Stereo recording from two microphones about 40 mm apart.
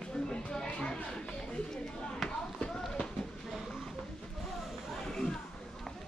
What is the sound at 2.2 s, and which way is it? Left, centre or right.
Run, left.